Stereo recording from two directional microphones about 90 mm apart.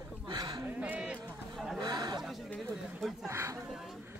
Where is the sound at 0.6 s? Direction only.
15° right (ahead or behind).